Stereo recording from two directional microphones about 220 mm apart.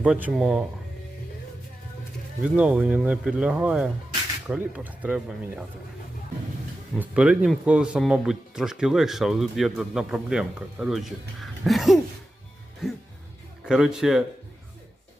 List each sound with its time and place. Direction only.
0.0 s speech: 5° right (ahead or behind)
2.4 s speech: 5° right (ahead or behind)
7.0 s speech: 5° right (ahead or behind)
13.7 s speech: 5° right (ahead or behind)